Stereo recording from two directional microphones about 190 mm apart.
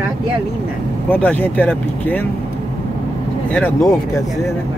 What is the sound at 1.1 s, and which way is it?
Speech, 10° left (ahead or behind).